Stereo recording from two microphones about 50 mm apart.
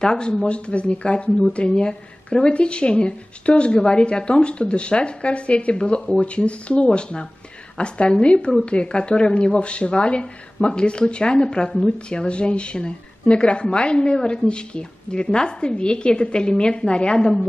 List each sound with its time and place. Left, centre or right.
0.0 s speech: centre